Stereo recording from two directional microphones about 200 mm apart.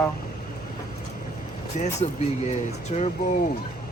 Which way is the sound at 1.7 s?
35° left (ahead or behind).